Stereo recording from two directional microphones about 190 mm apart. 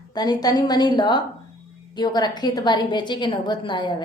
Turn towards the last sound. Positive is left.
turn(degrees=25)  # may be behind; listen again after turning